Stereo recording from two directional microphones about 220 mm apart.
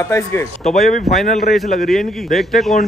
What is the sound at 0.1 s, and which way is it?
Speech, 10° left (ahead or behind).